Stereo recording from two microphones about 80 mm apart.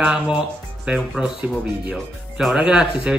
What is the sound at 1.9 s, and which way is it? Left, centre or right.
Speech, centre.